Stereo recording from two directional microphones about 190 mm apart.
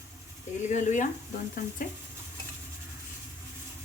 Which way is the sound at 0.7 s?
40° left (ahead or behind).